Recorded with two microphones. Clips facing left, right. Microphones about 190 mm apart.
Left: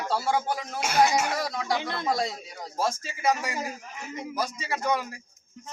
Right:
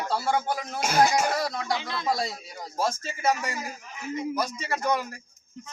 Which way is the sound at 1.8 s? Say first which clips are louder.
Left 2 dB; 55° left (ahead or behind).